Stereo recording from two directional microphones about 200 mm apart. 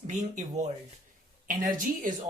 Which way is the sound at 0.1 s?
35° right (ahead or behind).